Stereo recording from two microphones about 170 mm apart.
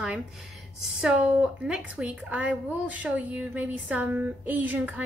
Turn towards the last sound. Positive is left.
turn(degrees=-10)  # may be behind; listen again after turning